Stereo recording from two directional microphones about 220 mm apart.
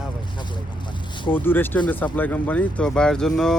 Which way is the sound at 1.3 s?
10° left (ahead or behind).